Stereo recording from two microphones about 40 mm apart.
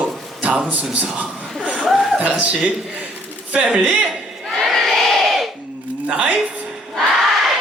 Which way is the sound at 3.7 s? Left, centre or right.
Right.